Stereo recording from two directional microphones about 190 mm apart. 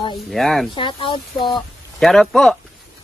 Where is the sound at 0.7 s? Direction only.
25° left (ahead or behind).